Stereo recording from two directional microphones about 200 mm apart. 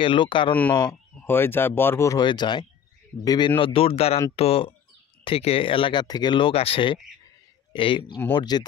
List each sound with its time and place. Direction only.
0.0 s speech: 25° left (ahead or behind)
1.2 s speech: 10° left (ahead or behind)